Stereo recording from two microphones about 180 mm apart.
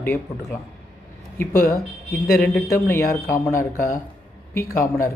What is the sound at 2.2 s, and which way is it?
Speech, 60° left (ahead or behind).